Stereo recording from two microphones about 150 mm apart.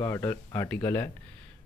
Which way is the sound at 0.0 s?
20° left (ahead or behind).